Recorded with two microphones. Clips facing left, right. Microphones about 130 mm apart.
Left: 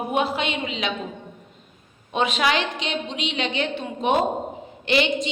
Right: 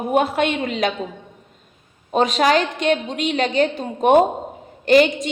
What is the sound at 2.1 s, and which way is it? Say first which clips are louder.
A woman's voice: right 5 dB; 40° right (ahead or behind).